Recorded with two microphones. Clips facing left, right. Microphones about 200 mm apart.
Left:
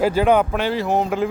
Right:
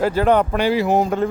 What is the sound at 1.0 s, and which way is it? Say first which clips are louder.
Speech: right 1 dB; 5° left (ahead or behind).